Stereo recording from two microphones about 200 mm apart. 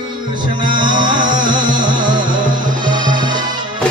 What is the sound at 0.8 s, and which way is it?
Music, 20° right (ahead or behind).